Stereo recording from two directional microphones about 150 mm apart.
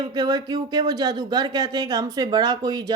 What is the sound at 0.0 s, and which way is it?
Speech, 25° right (ahead or behind).